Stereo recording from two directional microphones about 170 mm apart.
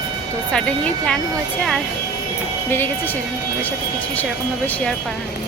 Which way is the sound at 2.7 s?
10° left (ahead or behind).